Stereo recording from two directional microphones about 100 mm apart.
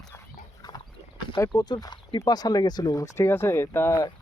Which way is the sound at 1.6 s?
45° left (ahead or behind).